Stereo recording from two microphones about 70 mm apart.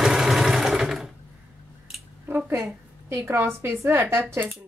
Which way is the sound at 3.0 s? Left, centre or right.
Right.